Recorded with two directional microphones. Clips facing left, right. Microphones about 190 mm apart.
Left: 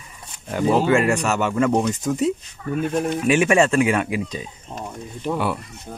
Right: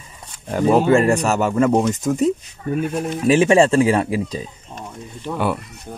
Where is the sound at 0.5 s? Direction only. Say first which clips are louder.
Right 3 dB; 40° right (ahead or behind).